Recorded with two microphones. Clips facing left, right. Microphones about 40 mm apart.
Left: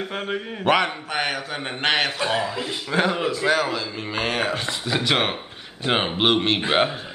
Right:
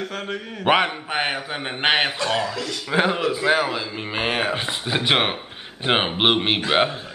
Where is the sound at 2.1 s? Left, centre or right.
Centre.